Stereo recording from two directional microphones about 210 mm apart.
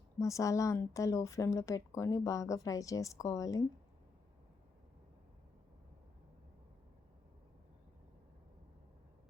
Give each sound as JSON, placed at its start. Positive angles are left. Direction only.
{"t": 0.2, "sound": "a woman's voice", "side_deg": 15}